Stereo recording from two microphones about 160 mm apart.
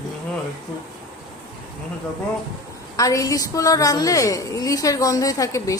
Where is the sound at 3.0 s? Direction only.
20° left (ahead or behind).